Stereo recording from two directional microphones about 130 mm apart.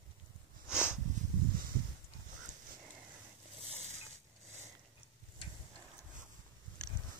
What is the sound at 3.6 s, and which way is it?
Vehicle, 55° right (ahead or behind).